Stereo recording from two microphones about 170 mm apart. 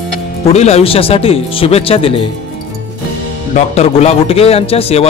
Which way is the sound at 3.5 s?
40° left (ahead or behind).